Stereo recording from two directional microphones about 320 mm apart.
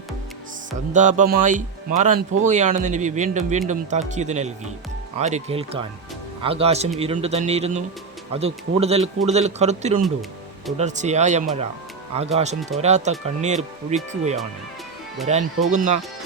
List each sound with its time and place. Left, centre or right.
0.9 s speech: right
8.8 s speech: centre